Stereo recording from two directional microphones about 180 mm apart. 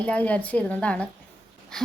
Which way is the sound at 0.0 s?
10° left (ahead or behind).